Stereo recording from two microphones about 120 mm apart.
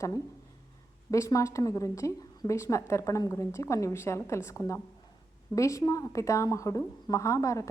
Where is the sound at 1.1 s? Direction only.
25° left (ahead or behind).